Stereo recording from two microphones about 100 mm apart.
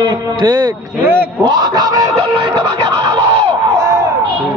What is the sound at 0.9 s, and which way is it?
Speech, 20° right (ahead or behind).